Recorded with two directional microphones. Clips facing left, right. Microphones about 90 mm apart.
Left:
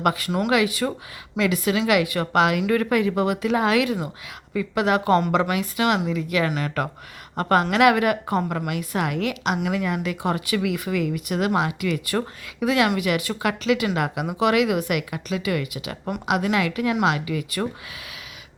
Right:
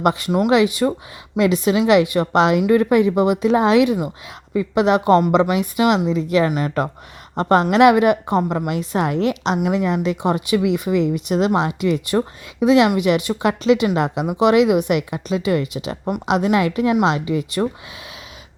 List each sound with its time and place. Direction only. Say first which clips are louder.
0.0 s a woman's voice: right 5 dB; 20° right (ahead or behind)